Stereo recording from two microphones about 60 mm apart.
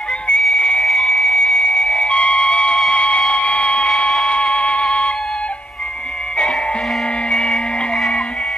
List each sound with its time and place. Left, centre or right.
0.4 s whistle: centre
0.8 s music: centre
2.9 s a sound: centre
4.3 s music: centre
7.2 s music: centre